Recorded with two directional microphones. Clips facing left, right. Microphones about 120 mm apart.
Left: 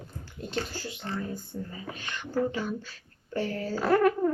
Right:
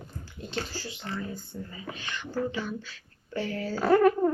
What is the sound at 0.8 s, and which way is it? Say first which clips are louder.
Speech: left 1 dB; 40° left (ahead or behind).